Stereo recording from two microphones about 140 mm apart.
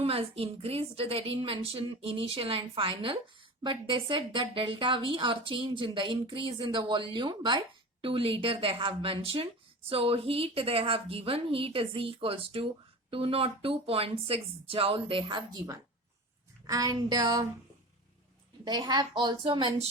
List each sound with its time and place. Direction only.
0.0 s a woman's voice: 45° right (ahead or behind); by 17.4 s 30° right (ahead or behind)
18.6 s a woman's voice: 30° right (ahead or behind)